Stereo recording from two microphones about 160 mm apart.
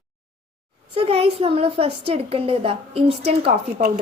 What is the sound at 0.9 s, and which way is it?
A woman's voice, 35° right (ahead or behind).